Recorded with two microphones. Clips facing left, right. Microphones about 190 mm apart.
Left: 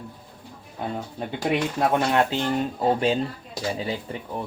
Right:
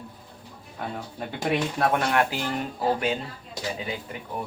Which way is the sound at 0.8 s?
20° left (ahead or behind).